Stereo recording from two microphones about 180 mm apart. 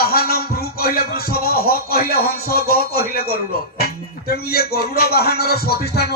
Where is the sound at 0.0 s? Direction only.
55° left (ahead or behind).